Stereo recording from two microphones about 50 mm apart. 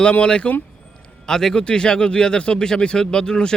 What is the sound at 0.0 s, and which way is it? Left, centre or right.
Speech, left.